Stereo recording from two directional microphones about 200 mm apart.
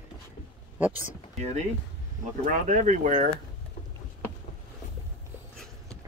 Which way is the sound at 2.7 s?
40° right (ahead or behind).